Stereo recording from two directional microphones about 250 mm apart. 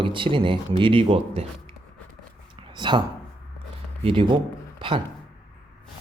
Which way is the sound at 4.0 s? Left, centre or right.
Right.